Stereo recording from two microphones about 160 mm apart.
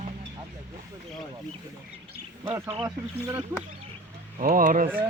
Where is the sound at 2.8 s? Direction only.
15° right (ahead or behind).